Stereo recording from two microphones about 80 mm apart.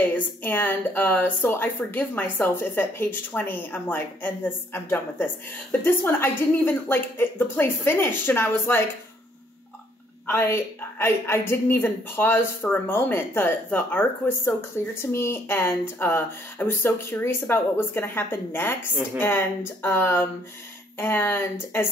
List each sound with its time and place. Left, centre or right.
0.1 s a woman's voice: left
10.2 s a woman's voice: left